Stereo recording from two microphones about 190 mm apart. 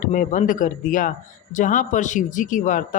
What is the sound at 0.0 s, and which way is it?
Speech, 45° left (ahead or behind).